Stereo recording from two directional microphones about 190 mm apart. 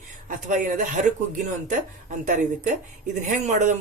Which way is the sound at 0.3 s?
45° right (ahead or behind).